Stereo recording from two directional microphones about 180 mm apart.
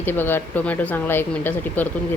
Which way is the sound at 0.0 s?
10° left (ahead or behind).